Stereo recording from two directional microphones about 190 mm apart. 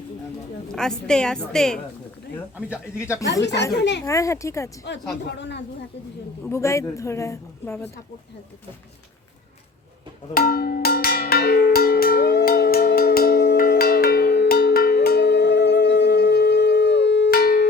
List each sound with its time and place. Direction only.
0.7 s a woman's voice: 5° left (ahead or behind)
3.0 s a woman's voice: 15° left (ahead or behind)
5.2 s speech: 65° left (ahead or behind)
6.4 s a woman's voice: 15° left (ahead or behind)
10.3 s cowbell: 55° left (ahead or behind)